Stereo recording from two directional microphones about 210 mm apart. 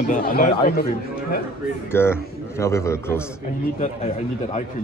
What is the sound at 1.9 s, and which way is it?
Speech, 10° left (ahead or behind).